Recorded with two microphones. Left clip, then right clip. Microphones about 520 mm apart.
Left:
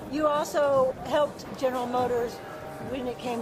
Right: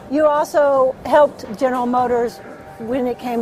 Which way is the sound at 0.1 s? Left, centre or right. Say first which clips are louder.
Right 10 dB; right.